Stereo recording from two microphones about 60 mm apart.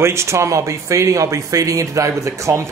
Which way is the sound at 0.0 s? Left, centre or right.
Right.